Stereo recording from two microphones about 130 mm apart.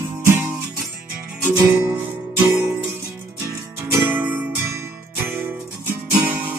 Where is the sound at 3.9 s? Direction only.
15° right (ahead or behind).